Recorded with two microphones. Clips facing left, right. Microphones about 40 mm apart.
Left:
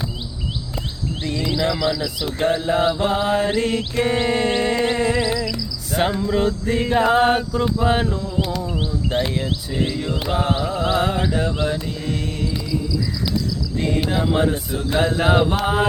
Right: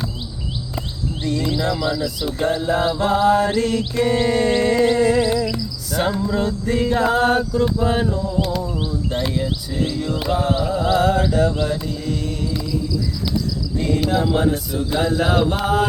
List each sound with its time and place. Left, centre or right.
1.2 s mantra: left
1.6 s speech: left
2.5 s mantra: centre
7.8 s speech: left
8.0 s a sound: centre
8.7 s a sound: left
9.3 s mantra: left
13.7 s cricket: left
14.0 s speech: centre
14.3 s mantra: left